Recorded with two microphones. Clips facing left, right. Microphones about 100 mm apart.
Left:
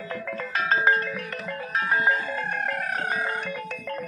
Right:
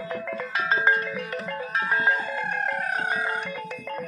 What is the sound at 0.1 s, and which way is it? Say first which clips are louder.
Music: even; centre (ahead or behind).